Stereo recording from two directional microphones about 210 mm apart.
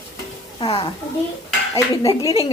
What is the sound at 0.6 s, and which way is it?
Speech, 25° left (ahead or behind).